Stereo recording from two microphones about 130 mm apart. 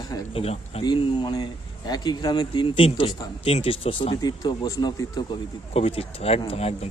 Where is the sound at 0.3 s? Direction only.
50° left (ahead or behind).